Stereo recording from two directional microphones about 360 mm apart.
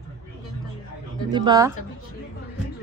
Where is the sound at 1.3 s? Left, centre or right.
Centre.